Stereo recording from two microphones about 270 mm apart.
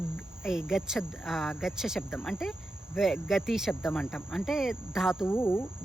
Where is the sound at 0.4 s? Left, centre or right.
Centre.